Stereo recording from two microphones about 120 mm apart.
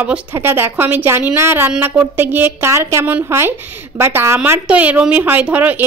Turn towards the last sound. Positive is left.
turn(degrees=-10)  # may be behind; listen again after turning